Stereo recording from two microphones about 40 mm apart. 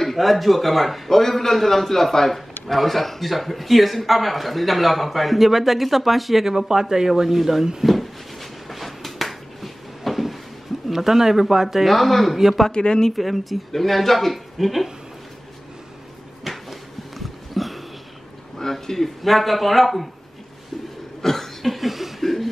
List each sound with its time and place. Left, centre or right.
0.0 s speech: centre
6.4 s speech: centre
7.8 s a sound: centre
10.9 s speech: centre
11.9 s speech: centre
12.7 s speech: left
13.1 s speech: centre
16.5 s a sound: centre
18.6 s a man's voice: centre
21.2 s cough: centre
22.2 s a sound: centre